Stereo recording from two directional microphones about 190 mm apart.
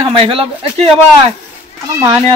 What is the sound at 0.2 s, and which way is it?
Speech, 30° right (ahead or behind).